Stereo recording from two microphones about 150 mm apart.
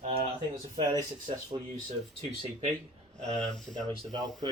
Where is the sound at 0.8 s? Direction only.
25° right (ahead or behind).